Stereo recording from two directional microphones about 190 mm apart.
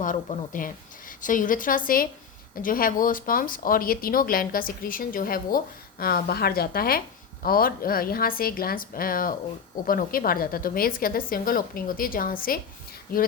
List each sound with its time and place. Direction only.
0.0 s a woman's voice: 45° left (ahead or behind)